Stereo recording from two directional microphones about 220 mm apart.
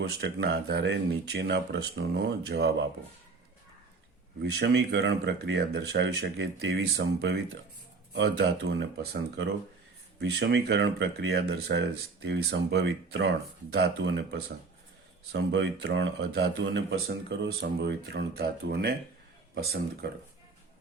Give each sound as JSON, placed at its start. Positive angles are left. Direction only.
{"t": 0.0, "sound": "speech", "side_deg": -45}
{"t": 4.6, "sound": "speech", "side_deg": -50}